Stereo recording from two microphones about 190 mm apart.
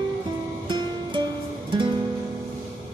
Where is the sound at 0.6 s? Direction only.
25° right (ahead or behind).